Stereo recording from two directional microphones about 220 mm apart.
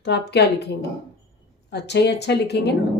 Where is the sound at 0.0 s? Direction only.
50° left (ahead or behind).